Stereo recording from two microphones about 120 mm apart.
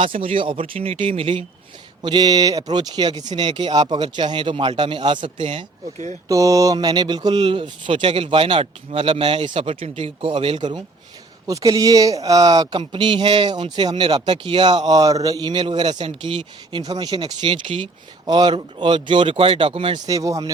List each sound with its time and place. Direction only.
0.0 s speech: 50° right (ahead or behind)
2.0 s a man's voice: 40° right (ahead or behind)
6.2 s speech: 30° right (ahead or behind)
11.4 s a man's voice: 30° right (ahead or behind)
12.8 s a man's voice: 45° right (ahead or behind)
20.1 s speech: 30° right (ahead or behind)